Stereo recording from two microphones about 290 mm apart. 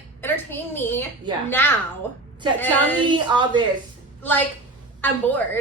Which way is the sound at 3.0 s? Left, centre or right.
Centre.